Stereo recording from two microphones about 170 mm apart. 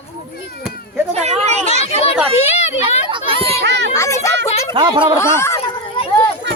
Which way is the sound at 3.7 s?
90° right.